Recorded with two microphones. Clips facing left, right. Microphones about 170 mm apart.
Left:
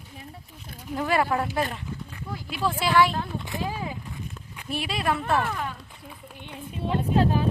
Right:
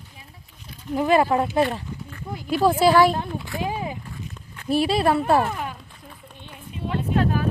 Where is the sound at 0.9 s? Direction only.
20° right (ahead or behind).